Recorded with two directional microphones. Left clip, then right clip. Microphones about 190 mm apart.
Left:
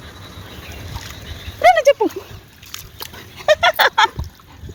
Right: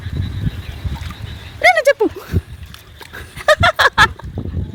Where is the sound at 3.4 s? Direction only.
25° right (ahead or behind).